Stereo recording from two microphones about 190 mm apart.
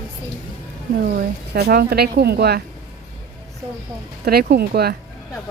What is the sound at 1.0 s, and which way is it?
Speech, 55° right (ahead or behind).